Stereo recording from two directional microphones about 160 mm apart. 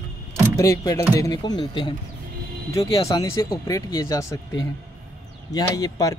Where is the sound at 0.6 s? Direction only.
20° left (ahead or behind).